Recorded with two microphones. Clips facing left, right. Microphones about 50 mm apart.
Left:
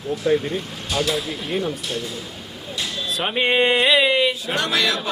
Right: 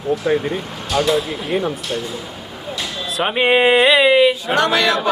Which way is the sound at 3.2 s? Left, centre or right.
Centre.